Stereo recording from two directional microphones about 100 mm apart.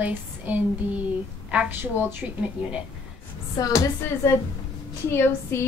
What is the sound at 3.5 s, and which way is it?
A woman's voice, 35° left (ahead or behind).